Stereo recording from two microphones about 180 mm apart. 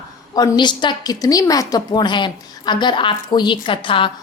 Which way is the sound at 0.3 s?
20° left (ahead or behind).